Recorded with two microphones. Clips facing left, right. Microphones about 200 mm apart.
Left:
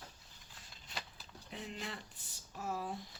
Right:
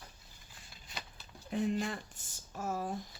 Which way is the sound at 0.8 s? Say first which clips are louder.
Even; 5° right (ahead or behind).